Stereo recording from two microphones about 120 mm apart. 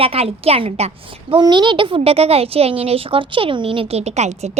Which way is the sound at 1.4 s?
40° right (ahead or behind).